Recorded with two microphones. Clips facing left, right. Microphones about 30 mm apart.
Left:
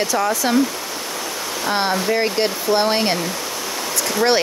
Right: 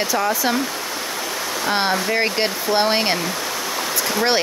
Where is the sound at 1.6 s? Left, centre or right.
Centre.